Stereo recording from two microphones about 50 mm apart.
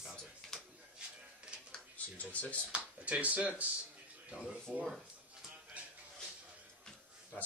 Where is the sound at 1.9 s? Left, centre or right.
Left.